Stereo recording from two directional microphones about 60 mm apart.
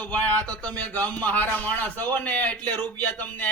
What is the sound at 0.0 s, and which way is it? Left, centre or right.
A man's voice, left.